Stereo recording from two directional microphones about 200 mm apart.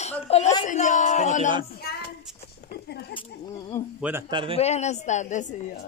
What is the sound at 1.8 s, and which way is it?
Child singing, 50° left (ahead or behind).